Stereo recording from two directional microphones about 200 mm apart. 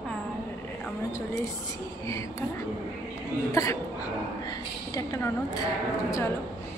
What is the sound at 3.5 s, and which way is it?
Speech, 15° left (ahead or behind).